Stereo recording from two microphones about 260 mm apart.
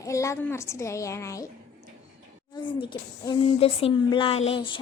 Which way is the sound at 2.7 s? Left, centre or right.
Centre.